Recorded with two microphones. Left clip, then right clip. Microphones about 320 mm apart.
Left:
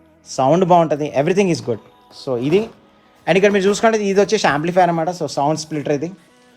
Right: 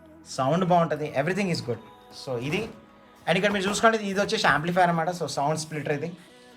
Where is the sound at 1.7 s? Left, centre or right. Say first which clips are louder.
Left 9 dB; right.